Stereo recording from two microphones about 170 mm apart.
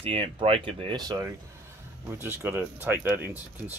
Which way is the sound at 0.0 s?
30° right (ahead or behind).